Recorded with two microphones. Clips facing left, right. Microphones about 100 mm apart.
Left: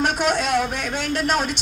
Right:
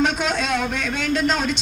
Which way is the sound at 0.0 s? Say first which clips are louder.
Even; 60° left (ahead or behind).